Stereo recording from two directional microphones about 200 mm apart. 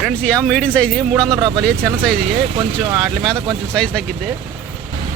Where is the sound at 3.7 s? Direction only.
5° left (ahead or behind).